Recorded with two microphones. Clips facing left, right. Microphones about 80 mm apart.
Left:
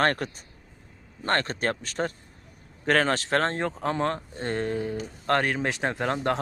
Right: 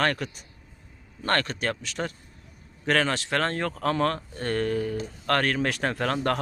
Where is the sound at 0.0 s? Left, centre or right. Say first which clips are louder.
Left 2 dB; left.